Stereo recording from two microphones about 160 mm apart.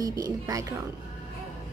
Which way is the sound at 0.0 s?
20° right (ahead or behind).